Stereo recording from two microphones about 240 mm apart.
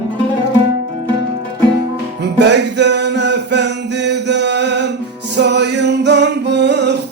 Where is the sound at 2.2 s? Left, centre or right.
Right.